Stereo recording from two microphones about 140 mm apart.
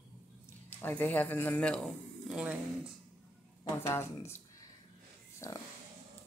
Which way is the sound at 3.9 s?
20° left (ahead or behind).